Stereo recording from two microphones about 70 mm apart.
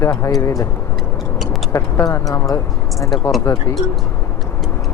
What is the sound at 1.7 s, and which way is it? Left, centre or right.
Speech, left.